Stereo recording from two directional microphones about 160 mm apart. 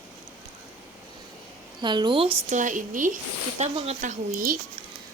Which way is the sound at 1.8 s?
30° right (ahead or behind).